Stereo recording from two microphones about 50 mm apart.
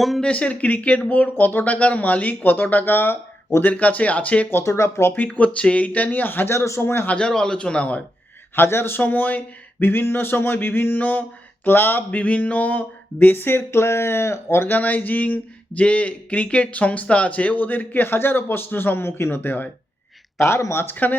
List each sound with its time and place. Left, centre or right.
0.2 s speech: left
3.6 s a man's voice: left
4.6 s speech: left
5.1 s speech: left
6.5 s speech: left
7.1 s a man's voice: centre
8.5 s a sound: left
9.0 s speech: left
9.8 s a sound: left
12.1 s a sound: left
14.7 s speech: left
20.4 s speech: left
20.9 s speech: left